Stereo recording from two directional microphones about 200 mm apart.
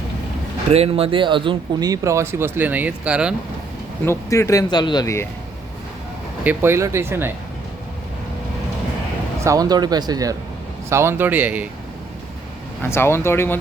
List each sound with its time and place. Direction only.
0.7 s speech: 30° right (ahead or behind); by 3.3 s 5° right (ahead or behind)
4.0 s speech: 15° left (ahead or behind)
6.4 s speech: 10° right (ahead or behind)
9.4 s speech: 15° right (ahead or behind)
12.8 s speech: 10° left (ahead or behind)